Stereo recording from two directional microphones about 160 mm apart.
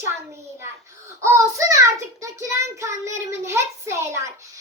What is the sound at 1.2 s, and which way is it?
Child singing, 20° right (ahead or behind).